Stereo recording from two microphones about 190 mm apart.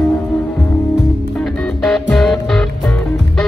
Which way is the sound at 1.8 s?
Centre (ahead or behind).